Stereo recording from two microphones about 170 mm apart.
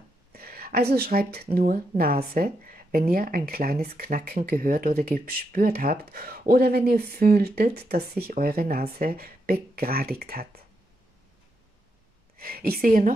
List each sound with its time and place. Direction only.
0.3 s speech: 60° right (ahead or behind)
12.4 s speech: 60° right (ahead or behind)